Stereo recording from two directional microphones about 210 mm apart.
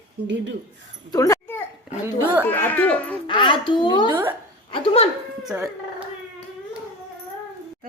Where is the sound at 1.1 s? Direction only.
15° left (ahead or behind).